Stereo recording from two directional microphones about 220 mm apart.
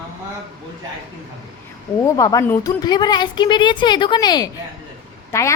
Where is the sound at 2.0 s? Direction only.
15° left (ahead or behind).